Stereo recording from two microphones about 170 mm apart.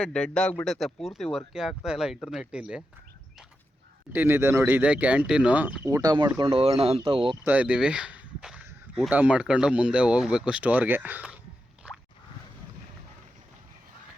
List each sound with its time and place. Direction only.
0.0 s speech: 5° left (ahead or behind)
4.1 s speech: 10° right (ahead or behind); by 7.3 s 30° right (ahead or behind)
7.4 s speech: 10° right (ahead or behind)